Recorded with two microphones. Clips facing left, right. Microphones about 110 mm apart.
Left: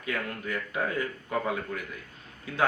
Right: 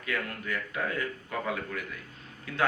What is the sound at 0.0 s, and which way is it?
A man's voice, 25° left (ahead or behind).